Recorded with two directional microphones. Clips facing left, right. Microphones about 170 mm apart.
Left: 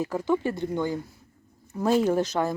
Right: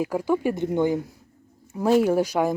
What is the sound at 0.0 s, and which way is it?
Speech, 10° right (ahead or behind).